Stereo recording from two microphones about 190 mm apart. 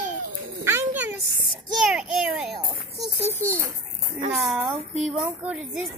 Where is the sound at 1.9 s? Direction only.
5° right (ahead or behind).